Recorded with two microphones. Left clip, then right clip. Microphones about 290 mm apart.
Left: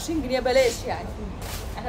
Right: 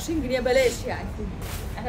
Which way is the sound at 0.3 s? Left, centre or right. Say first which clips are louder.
Left 1 dB; centre.